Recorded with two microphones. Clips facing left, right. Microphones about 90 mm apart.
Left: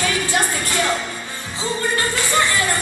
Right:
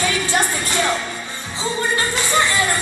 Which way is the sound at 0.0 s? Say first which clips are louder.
Right 1 dB; 20° right (ahead or behind).